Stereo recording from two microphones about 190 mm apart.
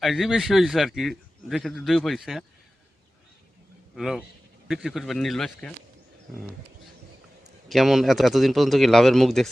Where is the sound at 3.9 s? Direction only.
Centre (ahead or behind).